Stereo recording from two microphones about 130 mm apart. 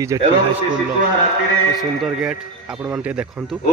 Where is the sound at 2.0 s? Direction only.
5° right (ahead or behind).